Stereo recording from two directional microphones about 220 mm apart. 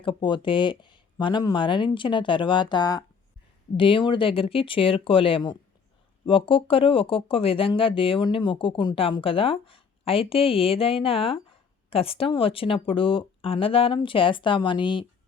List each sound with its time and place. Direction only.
0.0 s speech: 20° left (ahead or behind)